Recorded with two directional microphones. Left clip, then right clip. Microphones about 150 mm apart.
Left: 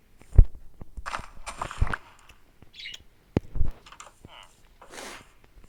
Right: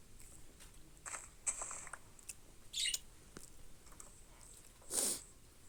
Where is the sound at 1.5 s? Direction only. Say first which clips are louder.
Left 13 dB; 50° left (ahead or behind).